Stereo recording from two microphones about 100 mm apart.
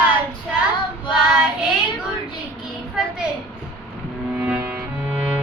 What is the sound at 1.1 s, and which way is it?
Child singing, 10° right (ahead or behind).